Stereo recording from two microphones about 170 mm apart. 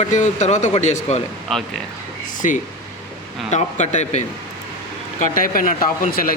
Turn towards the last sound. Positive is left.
turn(degrees=55)  # may be behind; listen again after turning